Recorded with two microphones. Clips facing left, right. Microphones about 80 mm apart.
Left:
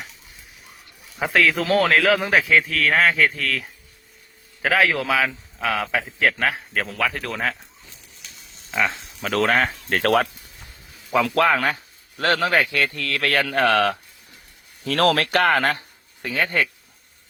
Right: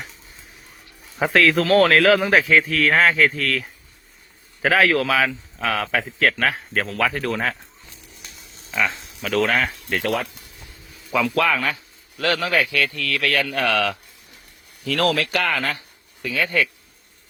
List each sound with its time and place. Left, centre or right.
1.2 s a man's voice: centre
8.7 s speech: centre
9.5 s speech: left
9.9 s speech: left
11.3 s speech: left